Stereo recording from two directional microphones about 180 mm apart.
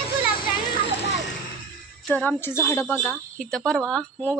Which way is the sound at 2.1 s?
10° left (ahead or behind).